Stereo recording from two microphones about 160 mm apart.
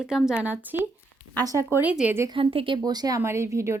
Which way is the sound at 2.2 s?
35° right (ahead or behind).